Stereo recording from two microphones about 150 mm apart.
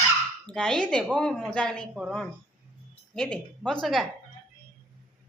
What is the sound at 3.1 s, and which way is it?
Speech, 5° left (ahead or behind).